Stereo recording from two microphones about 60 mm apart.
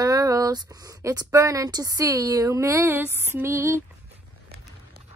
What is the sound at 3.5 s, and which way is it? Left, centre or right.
Speech, right.